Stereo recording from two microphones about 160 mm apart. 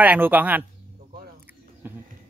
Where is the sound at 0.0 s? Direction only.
10° right (ahead or behind).